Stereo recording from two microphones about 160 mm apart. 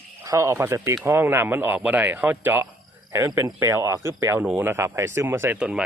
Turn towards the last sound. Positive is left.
turn(degrees=-5)  # may be behind; listen again after turning